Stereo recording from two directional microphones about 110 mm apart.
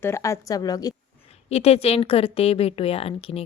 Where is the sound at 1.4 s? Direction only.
70° left (ahead or behind).